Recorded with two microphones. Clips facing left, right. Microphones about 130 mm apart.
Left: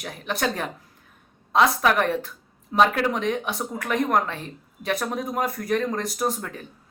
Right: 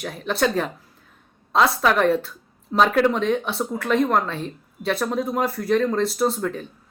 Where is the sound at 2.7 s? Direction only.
10° left (ahead or behind).